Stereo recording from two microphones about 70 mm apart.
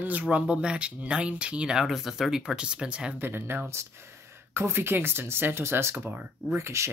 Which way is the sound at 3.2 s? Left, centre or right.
Right.